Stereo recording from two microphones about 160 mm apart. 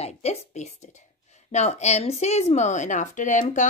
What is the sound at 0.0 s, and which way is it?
A woman's voice, 40° left (ahead or behind).